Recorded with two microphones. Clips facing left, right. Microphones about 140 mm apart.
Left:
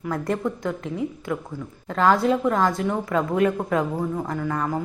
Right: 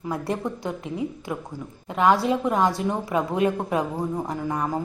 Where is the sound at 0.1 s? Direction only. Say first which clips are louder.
Left 2 dB; 15° right (ahead or behind).